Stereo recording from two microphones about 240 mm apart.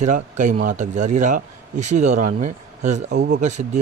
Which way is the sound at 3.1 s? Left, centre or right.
Right.